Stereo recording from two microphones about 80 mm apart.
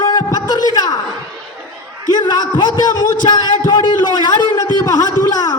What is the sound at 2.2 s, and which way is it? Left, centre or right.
A man's voice, left.